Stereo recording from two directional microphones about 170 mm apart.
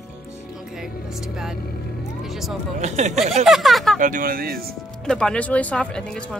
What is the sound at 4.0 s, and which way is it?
Speech, 50° right (ahead or behind).